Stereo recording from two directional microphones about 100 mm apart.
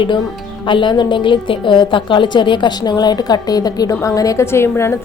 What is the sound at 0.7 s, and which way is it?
A woman's voice, 50° left (ahead or behind).